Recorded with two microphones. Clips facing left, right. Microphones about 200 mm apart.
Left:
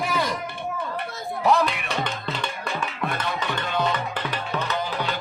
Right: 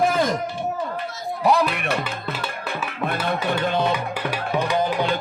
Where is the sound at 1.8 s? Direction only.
60° right (ahead or behind).